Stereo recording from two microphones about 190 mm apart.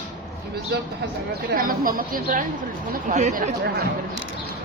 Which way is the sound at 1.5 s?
50° right (ahead or behind).